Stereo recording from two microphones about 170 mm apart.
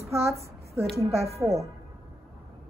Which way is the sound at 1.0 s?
15° right (ahead or behind).